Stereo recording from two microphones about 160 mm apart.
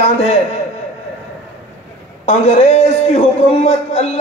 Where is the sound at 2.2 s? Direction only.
40° left (ahead or behind).